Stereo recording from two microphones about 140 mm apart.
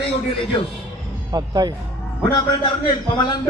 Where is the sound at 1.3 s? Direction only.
30° right (ahead or behind).